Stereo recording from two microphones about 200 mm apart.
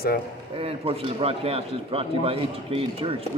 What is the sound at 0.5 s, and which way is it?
A man's voice, 30° right (ahead or behind).